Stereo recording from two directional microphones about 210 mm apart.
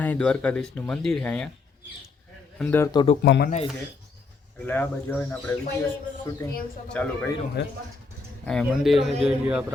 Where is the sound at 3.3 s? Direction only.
55° left (ahead or behind).